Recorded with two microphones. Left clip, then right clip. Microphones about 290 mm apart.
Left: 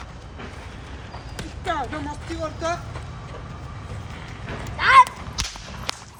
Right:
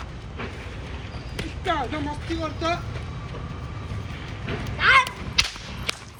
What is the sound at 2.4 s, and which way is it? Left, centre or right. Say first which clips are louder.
Speech: even; centre.